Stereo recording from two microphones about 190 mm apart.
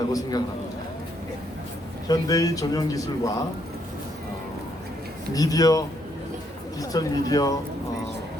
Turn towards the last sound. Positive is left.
turn(degrees=20)  # may be behind; listen again after turning